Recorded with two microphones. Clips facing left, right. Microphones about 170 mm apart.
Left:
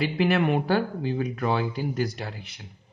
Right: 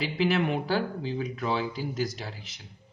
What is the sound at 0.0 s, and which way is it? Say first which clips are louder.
Speech: left 3 dB; 55° left (ahead or behind).